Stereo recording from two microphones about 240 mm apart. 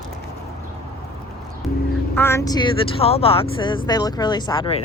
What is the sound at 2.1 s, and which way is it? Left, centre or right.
Speech, centre.